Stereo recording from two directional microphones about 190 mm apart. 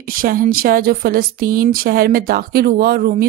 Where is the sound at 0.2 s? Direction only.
50° right (ahead or behind).